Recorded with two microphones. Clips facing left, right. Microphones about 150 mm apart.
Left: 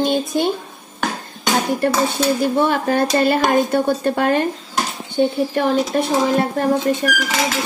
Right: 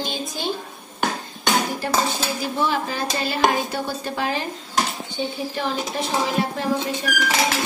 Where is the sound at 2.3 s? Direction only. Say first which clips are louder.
Left 7 dB; 55° left (ahead or behind).